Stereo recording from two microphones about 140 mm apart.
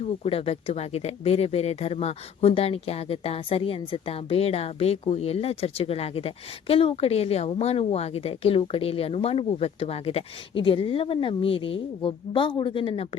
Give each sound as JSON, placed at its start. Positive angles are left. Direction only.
{"t": 0.0, "sound": "speech", "side_deg": 45}